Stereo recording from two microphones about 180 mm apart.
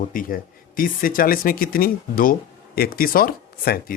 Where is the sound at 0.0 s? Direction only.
50° left (ahead or behind).